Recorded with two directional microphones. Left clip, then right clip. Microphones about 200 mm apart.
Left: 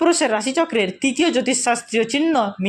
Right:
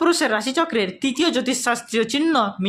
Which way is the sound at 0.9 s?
35° right (ahead or behind).